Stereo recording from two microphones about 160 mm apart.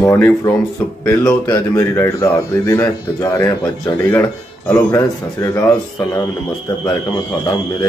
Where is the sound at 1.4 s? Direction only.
25° left (ahead or behind).